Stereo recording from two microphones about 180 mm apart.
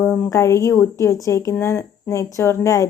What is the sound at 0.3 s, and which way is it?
Speech, 15° left (ahead or behind).